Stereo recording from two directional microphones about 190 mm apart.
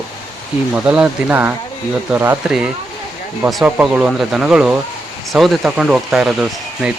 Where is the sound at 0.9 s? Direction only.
5° right (ahead or behind).